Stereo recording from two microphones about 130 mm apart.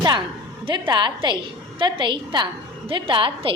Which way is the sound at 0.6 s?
35° right (ahead or behind).